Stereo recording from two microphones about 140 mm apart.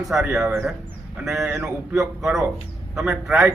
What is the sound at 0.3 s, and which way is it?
A man's voice, 20° right (ahead or behind).